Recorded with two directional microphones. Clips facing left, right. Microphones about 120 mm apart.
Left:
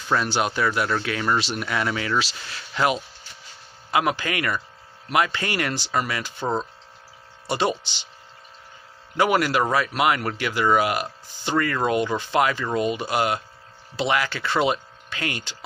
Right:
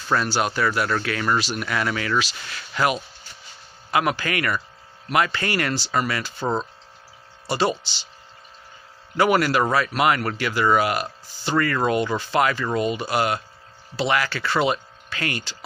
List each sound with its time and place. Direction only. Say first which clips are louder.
0.1 s speech: even; 15° left (ahead or behind)
7.4 s speech: right 1 dB; 15° left (ahead or behind)
9.1 s speech: right 1 dB; 15° left (ahead or behind)